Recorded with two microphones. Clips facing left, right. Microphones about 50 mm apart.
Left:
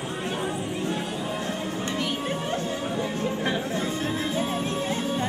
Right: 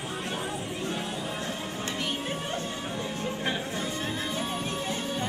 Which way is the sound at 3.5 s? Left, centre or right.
Left.